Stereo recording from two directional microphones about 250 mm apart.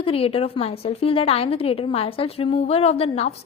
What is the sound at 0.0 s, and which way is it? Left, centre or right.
A woman's voice, left.